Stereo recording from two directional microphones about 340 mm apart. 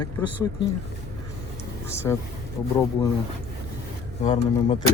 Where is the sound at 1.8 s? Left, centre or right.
Centre.